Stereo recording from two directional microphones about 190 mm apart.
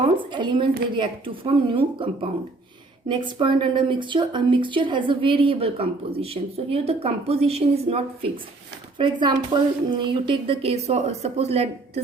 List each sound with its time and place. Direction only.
0.2 s a woman's voice: 25° right (ahead or behind)